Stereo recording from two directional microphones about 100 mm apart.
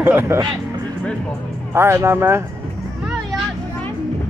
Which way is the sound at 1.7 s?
25° right (ahead or behind).